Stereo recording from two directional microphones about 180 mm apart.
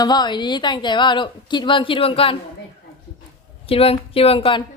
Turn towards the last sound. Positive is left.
turn(degrees=30)  # may be behind; listen again after turning